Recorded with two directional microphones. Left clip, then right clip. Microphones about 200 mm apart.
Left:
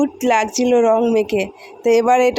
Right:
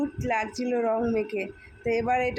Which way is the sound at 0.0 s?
40° left (ahead or behind).